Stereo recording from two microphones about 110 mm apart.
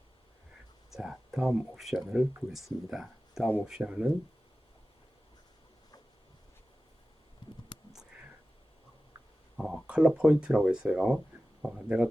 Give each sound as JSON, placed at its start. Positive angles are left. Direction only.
{"t": 0.9, "sound": "speech", "side_deg": -5}
{"t": 7.7, "sound": "a sound", "side_deg": 45}
{"t": 9.6, "sound": "speech", "side_deg": -5}